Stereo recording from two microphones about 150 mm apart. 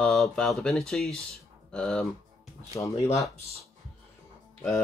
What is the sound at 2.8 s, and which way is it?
Speech, 20° left (ahead or behind).